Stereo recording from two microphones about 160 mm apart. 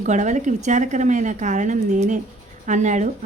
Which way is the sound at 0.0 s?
50° right (ahead or behind).